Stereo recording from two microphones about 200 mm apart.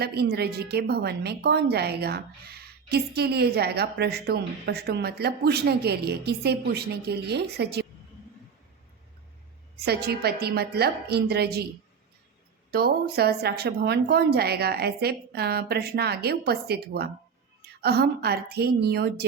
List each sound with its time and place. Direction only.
0.0 s a woman's voice: 55° right (ahead or behind)
9.8 s a woman's voice: 55° right (ahead or behind)
12.7 s a woman's voice: 50° right (ahead or behind)